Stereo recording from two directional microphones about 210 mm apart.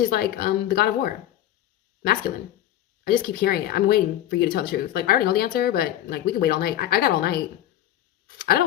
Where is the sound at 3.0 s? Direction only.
45° left (ahead or behind).